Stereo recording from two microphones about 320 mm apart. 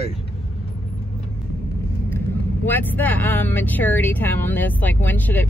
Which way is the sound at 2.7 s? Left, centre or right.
Centre.